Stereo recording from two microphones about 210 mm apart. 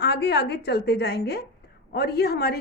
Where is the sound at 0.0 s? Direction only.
50° left (ahead or behind).